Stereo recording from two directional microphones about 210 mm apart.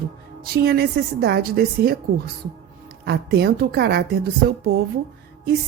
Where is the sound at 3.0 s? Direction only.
50° right (ahead or behind).